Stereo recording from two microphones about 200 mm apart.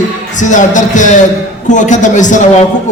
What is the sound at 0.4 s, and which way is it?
Speech, 40° left (ahead or behind).